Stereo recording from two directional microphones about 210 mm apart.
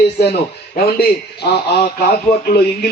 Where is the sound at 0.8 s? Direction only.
50° left (ahead or behind).